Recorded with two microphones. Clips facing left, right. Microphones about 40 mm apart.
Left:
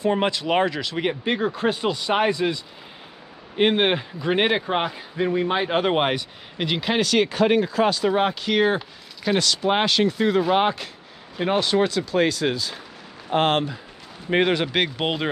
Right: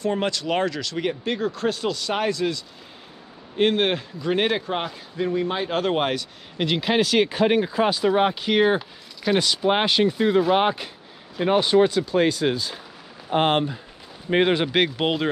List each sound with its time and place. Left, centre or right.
0.0 s a man's voice: centre
6.6 s speech: centre
8.7 s speech: centre
9.4 s speech: centre
10.1 s speech: left
10.4 s speech: centre
12.1 s speech: left
14.7 s speech: centre